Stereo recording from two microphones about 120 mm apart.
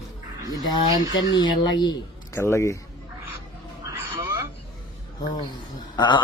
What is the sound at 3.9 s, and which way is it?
Music, 25° right (ahead or behind).